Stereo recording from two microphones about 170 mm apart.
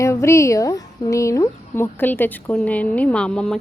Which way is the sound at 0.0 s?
15° left (ahead or behind).